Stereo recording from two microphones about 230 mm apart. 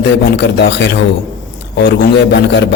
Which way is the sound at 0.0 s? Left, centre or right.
Left.